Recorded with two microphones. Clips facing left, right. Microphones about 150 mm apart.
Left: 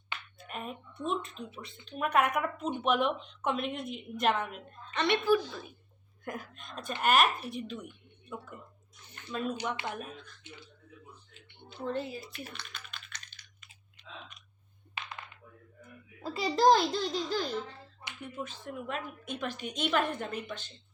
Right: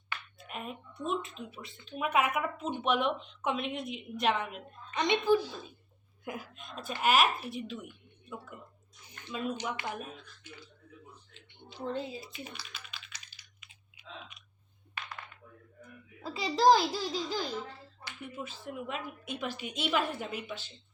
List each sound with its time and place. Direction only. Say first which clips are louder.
0.3 s a sound: left 2 dB; centre (ahead or behind)
1.0 s speech: even; centre (ahead or behind)
4.9 s a woman's voice: even; 15° right (ahead or behind)
6.2 s speech: left 1 dB; 5° right (ahead or behind)
9.0 s a sound: left 2 dB; 10° right (ahead or behind)
9.9 s speech: even; 5° right (ahead or behind)
10.5 s speech: right 1 dB; 25° left (ahead or behind)
11.8 s a woman's voice: left 1 dB; 15° right (ahead or behind)
12.5 s typing: left 1 dB; 5° right (ahead or behind)
15.0 s a sound: left 1 dB; 25° left (ahead or behind)
15.8 s a child's voice: left 2 dB; centre (ahead or behind)